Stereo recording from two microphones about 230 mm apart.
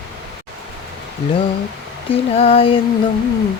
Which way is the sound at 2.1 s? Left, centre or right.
Left.